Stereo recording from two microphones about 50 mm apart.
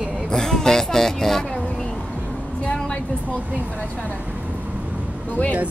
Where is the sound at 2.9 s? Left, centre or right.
Left.